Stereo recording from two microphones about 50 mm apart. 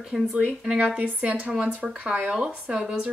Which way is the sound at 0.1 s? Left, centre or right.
Centre.